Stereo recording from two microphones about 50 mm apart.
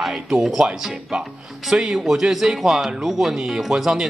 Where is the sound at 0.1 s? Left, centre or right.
Centre.